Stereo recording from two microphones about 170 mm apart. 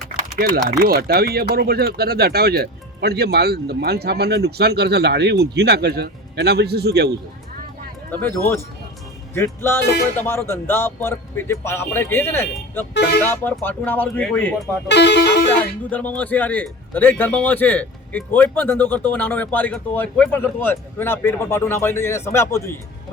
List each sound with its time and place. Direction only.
0.3 s speech: 60° right (ahead or behind)
8.1 s a man's voice: 10° left (ahead or behind)
14.8 s speech: 90° left
15.9 s a man's voice: 10° left (ahead or behind)